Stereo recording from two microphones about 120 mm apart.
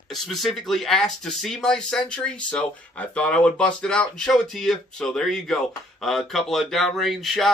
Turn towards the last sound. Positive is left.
turn(degrees=0)  # may be behind; listen again after turning